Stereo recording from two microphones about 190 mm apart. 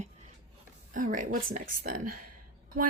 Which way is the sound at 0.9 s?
45° right (ahead or behind).